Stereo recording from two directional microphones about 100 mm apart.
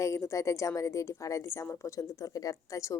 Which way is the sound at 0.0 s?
30° left (ahead or behind).